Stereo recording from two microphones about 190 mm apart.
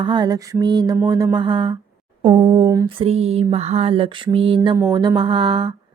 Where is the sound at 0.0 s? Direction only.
25° right (ahead or behind).